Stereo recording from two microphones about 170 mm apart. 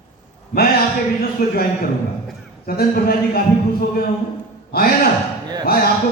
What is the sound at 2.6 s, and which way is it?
Speech, 65° left (ahead or behind).